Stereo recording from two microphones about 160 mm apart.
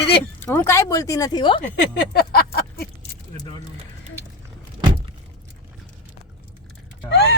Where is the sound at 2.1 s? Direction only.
75° left (ahead or behind).